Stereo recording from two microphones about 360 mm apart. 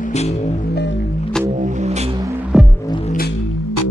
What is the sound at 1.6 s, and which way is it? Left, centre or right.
Music, centre.